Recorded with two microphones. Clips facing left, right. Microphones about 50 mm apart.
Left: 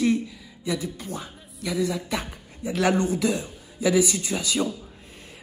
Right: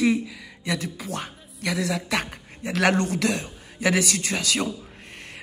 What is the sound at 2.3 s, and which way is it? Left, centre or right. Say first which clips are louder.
Speech: even; right.